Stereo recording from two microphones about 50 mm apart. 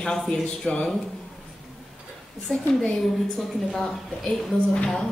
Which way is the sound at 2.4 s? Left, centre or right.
Centre.